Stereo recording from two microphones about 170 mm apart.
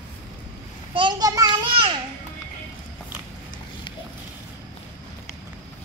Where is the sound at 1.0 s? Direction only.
25° right (ahead or behind).